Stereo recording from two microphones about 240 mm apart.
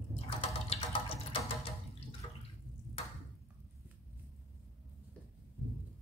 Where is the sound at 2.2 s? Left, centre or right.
Centre.